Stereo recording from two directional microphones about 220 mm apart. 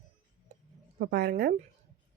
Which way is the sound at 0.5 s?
35° right (ahead or behind).